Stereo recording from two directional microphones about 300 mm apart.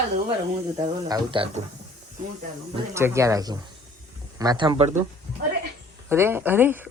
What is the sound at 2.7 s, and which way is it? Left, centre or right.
Speech, centre.